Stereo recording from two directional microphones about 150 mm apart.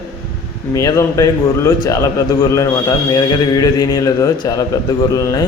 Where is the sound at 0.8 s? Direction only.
20° left (ahead or behind).